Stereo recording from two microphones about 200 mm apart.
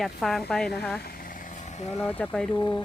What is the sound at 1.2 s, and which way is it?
Vehicle, 35° left (ahead or behind).